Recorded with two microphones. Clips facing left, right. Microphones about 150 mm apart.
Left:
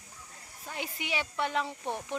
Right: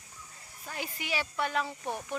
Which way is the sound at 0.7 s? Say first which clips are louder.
Even; 20° left (ahead or behind).